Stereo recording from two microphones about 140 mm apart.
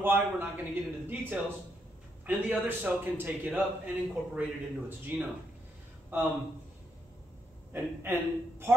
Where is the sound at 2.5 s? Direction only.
15° right (ahead or behind).